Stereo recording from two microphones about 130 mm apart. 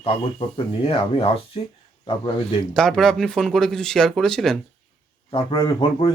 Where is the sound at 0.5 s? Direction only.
45° left (ahead or behind).